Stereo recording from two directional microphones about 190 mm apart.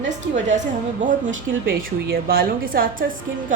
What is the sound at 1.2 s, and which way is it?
Speech, 85° right.